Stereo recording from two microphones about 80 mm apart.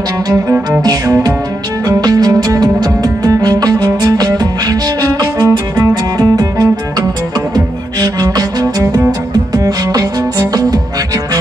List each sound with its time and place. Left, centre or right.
0.3 s music: right